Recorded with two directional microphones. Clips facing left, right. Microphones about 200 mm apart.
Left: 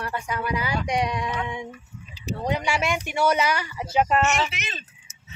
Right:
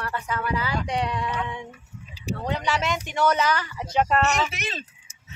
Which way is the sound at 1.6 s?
10° right (ahead or behind).